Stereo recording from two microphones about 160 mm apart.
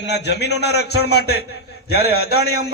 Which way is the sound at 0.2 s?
90° left.